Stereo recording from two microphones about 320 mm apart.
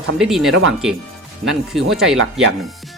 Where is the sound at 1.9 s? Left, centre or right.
Centre.